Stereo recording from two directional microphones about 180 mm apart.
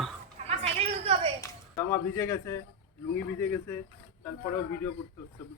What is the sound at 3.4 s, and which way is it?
Speech, 10° left (ahead or behind).